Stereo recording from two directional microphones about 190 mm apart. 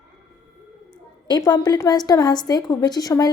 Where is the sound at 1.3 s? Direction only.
20° left (ahead or behind).